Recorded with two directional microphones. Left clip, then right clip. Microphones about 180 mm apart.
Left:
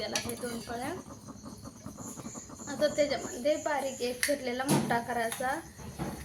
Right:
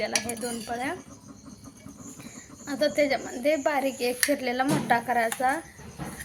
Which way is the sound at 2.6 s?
40° right (ahead or behind).